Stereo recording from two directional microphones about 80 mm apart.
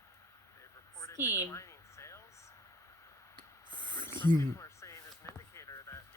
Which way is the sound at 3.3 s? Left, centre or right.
Right.